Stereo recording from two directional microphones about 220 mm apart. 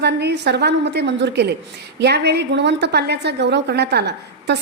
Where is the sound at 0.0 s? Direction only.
50° right (ahead or behind).